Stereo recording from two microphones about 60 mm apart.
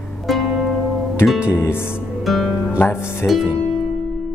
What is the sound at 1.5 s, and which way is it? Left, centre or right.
Speech, left.